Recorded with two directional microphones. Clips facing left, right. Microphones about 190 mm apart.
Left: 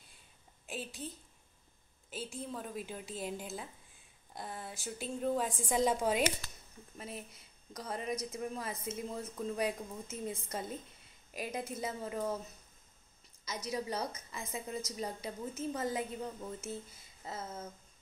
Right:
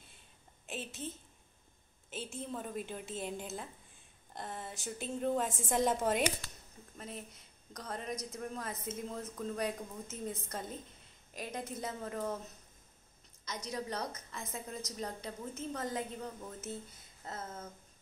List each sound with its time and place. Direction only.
0.7 s a sound: centre (ahead or behind)
2.1 s a woman's voice: centre (ahead or behind)
13.7 s a woman's voice: 5° left (ahead or behind)